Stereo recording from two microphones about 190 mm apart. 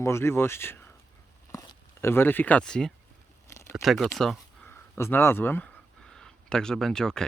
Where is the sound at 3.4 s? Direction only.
15° left (ahead or behind).